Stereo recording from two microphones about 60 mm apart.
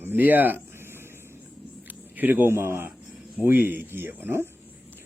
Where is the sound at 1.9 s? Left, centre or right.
Right.